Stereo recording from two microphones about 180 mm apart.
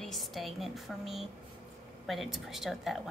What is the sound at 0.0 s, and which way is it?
A woman's voice, centre (ahead or behind).